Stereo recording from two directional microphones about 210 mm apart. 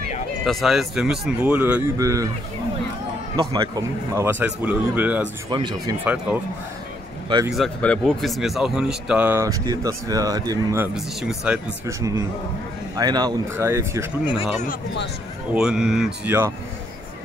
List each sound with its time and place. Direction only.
0.5 s speech: centre (ahead or behind)
3.3 s a man's voice: 20° right (ahead or behind)
5.5 s speech: 20° right (ahead or behind)
7.2 s speech: 20° right (ahead or behind)
7.5 s speech: 5° left (ahead or behind); by 10.9 s 15° right (ahead or behind)
11.0 s a man's voice: centre (ahead or behind)
15.5 s speech: 5° right (ahead or behind)